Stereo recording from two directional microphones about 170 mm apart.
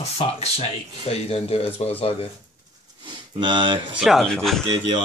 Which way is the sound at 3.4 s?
30° right (ahead or behind).